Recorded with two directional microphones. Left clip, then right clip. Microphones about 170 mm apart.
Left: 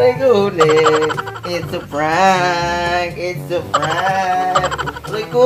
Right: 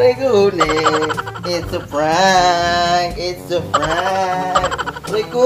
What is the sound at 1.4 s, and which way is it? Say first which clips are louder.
Speech: right 1 dB; 10° left (ahead or behind).